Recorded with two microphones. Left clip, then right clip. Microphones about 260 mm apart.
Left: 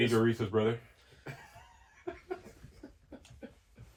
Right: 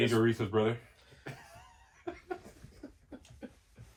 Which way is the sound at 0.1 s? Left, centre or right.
Right.